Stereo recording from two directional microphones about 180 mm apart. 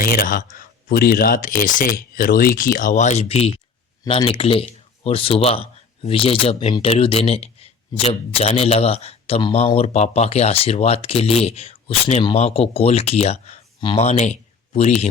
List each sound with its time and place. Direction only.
0.0 s speech: 55° left (ahead or behind); by 15.0 s 35° left (ahead or behind)